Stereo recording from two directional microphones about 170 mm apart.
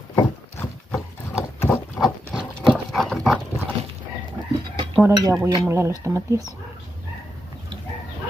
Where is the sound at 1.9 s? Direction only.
Centre (ahead or behind).